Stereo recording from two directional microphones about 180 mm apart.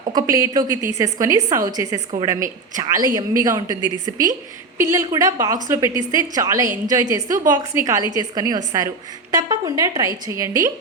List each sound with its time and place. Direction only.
0.1 s a woman's voice: 20° right (ahead or behind)